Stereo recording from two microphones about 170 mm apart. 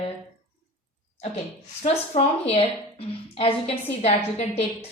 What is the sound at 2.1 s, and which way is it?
A woman's voice, 35° left (ahead or behind).